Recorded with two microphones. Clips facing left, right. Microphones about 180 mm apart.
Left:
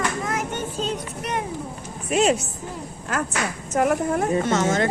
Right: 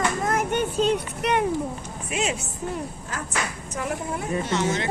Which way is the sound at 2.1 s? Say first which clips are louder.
Left 8 dB; 40° left (ahead or behind).